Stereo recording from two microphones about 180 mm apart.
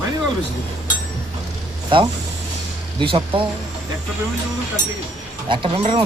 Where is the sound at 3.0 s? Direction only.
30° right (ahead or behind).